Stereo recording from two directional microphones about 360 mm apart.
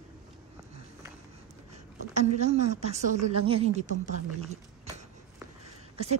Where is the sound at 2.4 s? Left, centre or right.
Centre.